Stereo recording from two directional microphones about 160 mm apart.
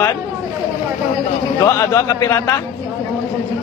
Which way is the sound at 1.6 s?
20° left (ahead or behind).